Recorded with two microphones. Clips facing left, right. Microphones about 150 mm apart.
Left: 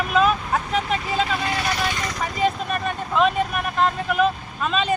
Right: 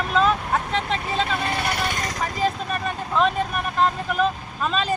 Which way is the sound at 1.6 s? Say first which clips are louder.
Left 1 dB; 50° right (ahead or behind).